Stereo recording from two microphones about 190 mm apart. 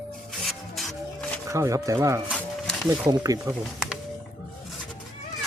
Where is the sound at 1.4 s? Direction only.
15° right (ahead or behind).